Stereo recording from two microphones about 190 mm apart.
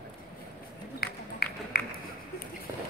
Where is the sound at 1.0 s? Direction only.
55° left (ahead or behind).